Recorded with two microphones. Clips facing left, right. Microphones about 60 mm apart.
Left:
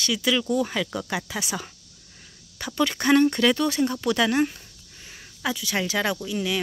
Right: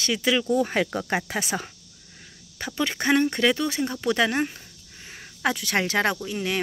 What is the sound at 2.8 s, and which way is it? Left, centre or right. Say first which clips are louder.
Speech: left 3 dB; right.